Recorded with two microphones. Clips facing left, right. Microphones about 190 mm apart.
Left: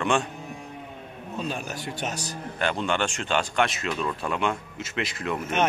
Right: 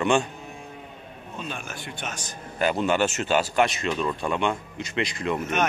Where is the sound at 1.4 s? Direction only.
40° left (ahead or behind).